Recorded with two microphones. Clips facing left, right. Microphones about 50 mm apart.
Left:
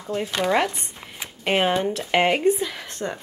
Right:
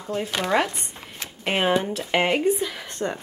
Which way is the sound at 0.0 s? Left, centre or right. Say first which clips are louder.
Left 2 dB; centre.